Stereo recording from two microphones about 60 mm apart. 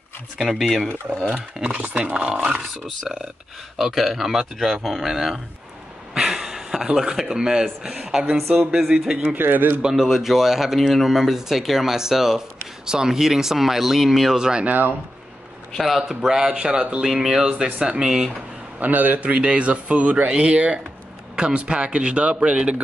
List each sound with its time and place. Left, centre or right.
0.4 s speech: centre
1.7 s speech: right
3.7 s a man's voice: centre
9.3 s speech: right
9.8 s speech: centre
14.6 s speech: right
15.7 s a man's voice: centre
18.8 s a man's voice: right